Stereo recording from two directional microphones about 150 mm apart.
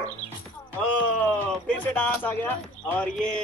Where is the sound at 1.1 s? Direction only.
10° left (ahead or behind).